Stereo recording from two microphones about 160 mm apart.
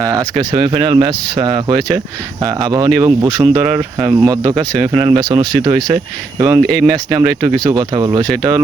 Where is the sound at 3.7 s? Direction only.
15° right (ahead or behind).